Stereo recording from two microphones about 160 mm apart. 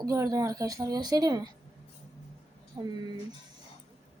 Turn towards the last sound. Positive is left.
turn(degrees=-25)  # may be behind; listen again after turning